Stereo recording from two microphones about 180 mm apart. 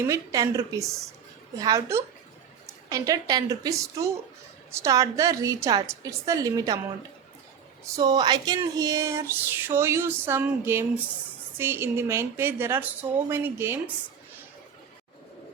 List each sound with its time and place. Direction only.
0.0 s a woman's voice: 15° right (ahead or behind)
7.9 s speech: 20° right (ahead or behind)